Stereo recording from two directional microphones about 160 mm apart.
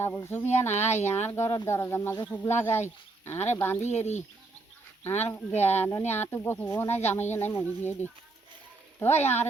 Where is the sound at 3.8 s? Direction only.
45° left (ahead or behind).